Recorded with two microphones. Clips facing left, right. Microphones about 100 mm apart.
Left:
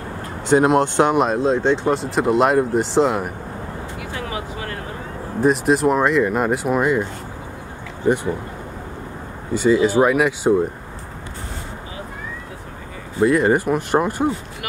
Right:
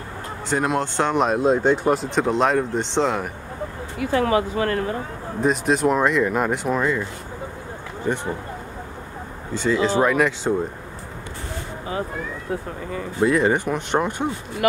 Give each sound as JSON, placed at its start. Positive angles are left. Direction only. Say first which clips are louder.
{"t": 0.5, "sound": "speech", "louder": "left 7 dB", "side_deg": 20}
{"t": 1.1, "sound": "speech", "louder": "left 2 dB", "side_deg": 0}
{"t": 1.4, "sound": "speech", "louder": "even", "side_deg": -10}
{"t": 2.0, "sound": "speech", "louder": "left 3 dB", "side_deg": 5}
{"t": 4.1, "sound": "speech", "louder": "right 11 dB", "side_deg": -55}
{"t": 5.4, "sound": "speech", "louder": "left 3 dB", "side_deg": 0}
{"t": 6.8, "sound": "speech", "louder": "left 4 dB", "side_deg": 15}
{"t": 9.5, "sound": "speech", "louder": "left 4 dB", "side_deg": 10}
{"t": 13.2, "sound": "speech", "louder": "left 3 dB", "side_deg": 0}